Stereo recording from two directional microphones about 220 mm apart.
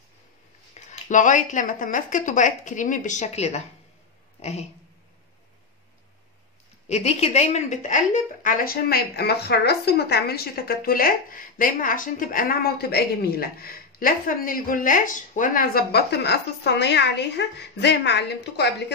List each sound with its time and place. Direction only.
0.7 s a woman's voice: 35° left (ahead or behind)
6.9 s a woman's voice: 30° left (ahead or behind); by 18.7 s 50° left (ahead or behind)